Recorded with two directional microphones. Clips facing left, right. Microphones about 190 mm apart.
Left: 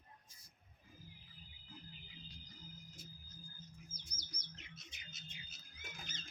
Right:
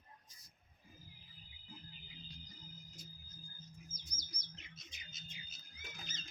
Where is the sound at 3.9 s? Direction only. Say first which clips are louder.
Right 1 dB; 65° left (ahead or behind).